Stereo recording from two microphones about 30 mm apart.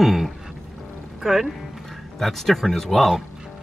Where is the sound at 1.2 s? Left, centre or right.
Centre.